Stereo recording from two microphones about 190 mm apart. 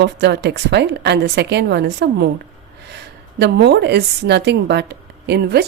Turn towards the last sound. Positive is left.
turn(degrees=-60)  # may be behind; listen again after turning